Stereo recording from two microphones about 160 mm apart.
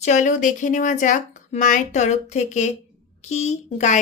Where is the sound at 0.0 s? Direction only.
50° left (ahead or behind).